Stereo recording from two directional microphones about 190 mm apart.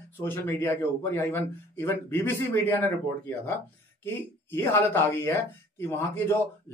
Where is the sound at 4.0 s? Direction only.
10° left (ahead or behind).